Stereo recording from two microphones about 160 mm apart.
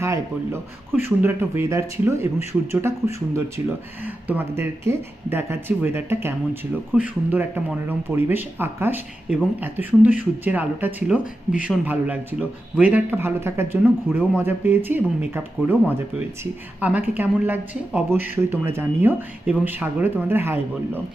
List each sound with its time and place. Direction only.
0.0 s a man's voice: 15° right (ahead or behind)
2.5 s speech: 5° right (ahead or behind)
4.0 s a man's voice: 10° right (ahead or behind)